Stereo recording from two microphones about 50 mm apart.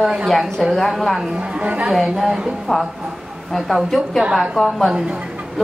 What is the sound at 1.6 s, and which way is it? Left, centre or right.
Speech, right.